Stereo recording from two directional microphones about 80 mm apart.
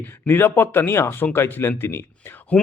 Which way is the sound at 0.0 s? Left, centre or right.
Left.